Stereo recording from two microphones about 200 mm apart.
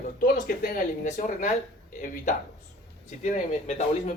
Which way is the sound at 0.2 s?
45° left (ahead or behind).